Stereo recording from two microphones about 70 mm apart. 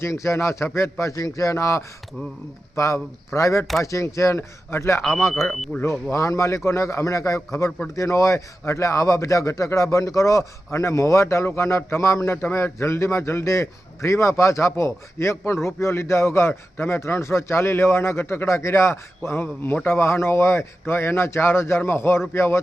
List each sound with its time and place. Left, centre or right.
0.0 s a man's voice: left
5.5 s speech: centre
6.1 s a man's voice: left